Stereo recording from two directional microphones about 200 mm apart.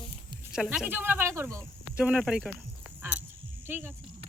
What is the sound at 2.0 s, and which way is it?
Speech, 5° right (ahead or behind).